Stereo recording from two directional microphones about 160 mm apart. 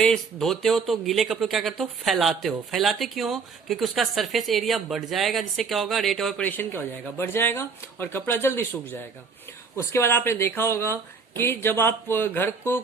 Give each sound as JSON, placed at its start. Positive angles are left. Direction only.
{"t": 0.0, "sound": "speech", "side_deg": 0}